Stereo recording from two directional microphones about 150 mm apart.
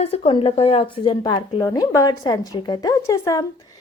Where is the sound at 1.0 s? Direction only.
30° left (ahead or behind).